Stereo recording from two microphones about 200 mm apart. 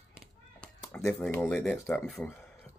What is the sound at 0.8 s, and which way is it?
Speech, 5° left (ahead or behind).